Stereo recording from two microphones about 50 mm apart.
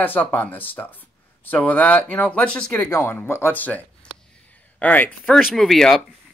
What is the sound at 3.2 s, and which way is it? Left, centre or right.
Speech, left.